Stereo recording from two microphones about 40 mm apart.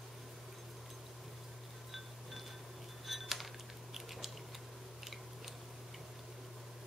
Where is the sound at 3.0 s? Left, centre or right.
Centre.